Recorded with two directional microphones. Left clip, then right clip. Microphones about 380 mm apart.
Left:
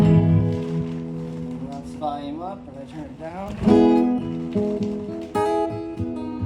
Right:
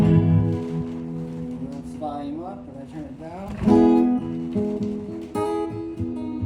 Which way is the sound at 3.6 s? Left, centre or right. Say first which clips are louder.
Left 1 dB; left.